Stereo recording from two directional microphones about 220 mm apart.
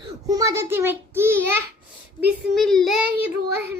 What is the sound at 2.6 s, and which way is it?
Child singing, centre (ahead or behind).